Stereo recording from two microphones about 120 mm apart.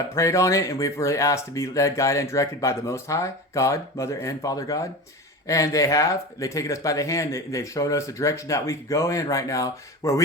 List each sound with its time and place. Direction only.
0.1 s speech: 25° left (ahead or behind)